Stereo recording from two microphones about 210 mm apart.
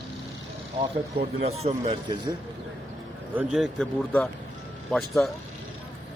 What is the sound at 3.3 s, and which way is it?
A man's voice, centre (ahead or behind).